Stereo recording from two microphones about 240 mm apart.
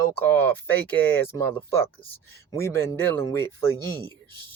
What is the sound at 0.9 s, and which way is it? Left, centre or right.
Speech, centre.